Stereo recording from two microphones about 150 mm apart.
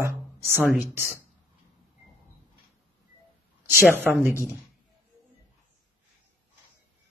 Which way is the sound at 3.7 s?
15° right (ahead or behind).